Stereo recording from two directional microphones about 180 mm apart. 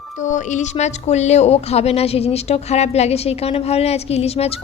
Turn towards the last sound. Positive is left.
turn(degrees=35)  # may be behind; listen again after turning